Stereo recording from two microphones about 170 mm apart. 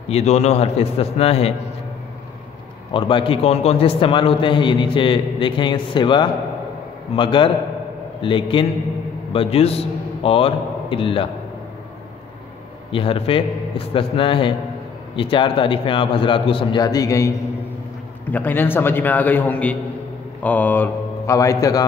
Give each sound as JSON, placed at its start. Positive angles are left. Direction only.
{"t": 0.1, "sound": "a man's voice", "side_deg": 40}
{"t": 2.9, "sound": "a man's voice", "side_deg": 30}
{"t": 12.9, "sound": "a man's voice", "side_deg": 30}